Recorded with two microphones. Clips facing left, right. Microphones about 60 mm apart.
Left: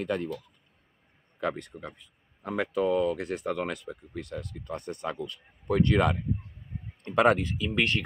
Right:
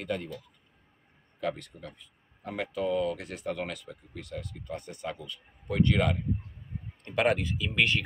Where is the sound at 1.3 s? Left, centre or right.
Left.